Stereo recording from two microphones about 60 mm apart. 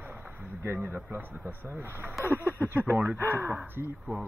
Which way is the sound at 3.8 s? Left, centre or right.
Right.